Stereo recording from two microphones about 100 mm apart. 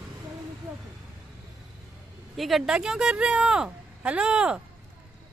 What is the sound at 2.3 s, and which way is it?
Speech, centre (ahead or behind).